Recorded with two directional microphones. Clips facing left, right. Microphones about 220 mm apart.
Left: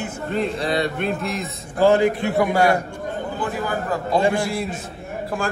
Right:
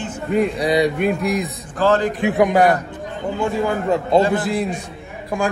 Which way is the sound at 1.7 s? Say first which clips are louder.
Left 2 dB; 10° left (ahead or behind).